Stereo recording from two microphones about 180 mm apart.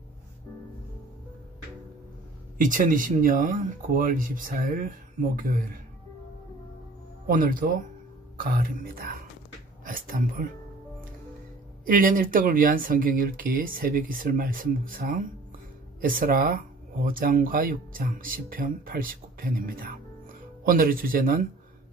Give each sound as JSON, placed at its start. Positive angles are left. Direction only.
{"t": 2.5, "sound": "speech", "side_deg": -45}
{"t": 7.2, "sound": "speech", "side_deg": -50}
{"t": 11.8, "sound": "speech", "side_deg": -50}